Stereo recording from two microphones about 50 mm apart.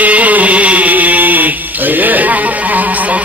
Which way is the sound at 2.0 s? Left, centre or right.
Right.